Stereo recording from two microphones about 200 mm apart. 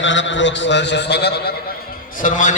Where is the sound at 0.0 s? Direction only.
65° left (ahead or behind).